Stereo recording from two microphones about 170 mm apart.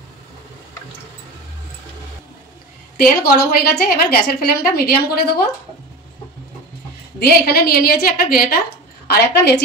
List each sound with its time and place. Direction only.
3.0 s a woman's voice: 65° left (ahead or behind)
7.2 s a woman's voice: 65° left (ahead or behind)
9.0 s a woman's voice: 70° left (ahead or behind)